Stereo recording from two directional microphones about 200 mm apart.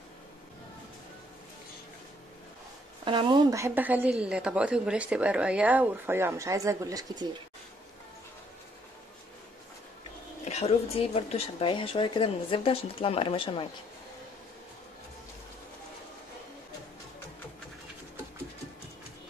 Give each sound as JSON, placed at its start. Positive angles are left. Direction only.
{"t": 3.1, "sound": "a woman's voice", "side_deg": -25}
{"t": 10.4, "sound": "a woman's voice", "side_deg": 35}